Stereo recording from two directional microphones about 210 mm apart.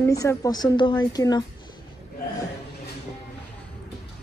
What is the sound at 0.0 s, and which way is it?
A woman's voice, 15° left (ahead or behind).